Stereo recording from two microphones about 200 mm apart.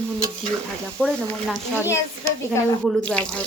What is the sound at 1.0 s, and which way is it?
Speech, centre (ahead or behind).